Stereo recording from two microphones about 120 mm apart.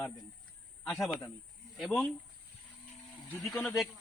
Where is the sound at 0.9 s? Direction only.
15° left (ahead or behind).